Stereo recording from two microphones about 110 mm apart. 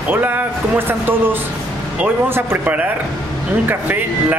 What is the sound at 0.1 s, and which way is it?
Speech, 15° right (ahead or behind).